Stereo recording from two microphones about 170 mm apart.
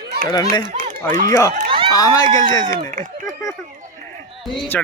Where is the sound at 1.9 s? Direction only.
20° left (ahead or behind).